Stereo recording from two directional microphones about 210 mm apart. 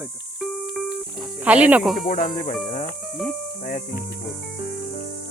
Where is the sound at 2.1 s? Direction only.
40° left (ahead or behind).